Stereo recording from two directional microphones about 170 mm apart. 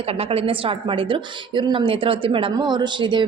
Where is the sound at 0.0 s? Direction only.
35° right (ahead or behind).